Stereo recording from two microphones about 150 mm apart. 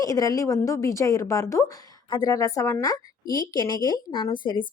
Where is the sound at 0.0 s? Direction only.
25° left (ahead or behind).